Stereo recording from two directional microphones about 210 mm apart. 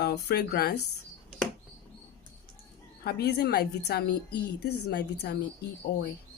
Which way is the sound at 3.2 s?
50° left (ahead or behind).